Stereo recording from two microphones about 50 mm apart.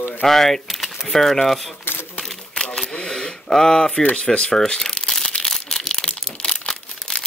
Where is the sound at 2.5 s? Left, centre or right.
Centre.